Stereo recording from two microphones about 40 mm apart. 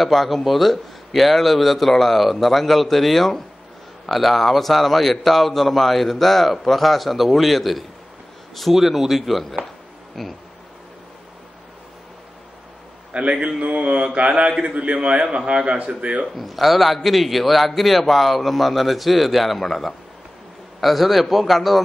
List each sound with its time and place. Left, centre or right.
0.0 s a man's voice: centre
13.1 s a man's voice: right
16.3 s a man's voice: centre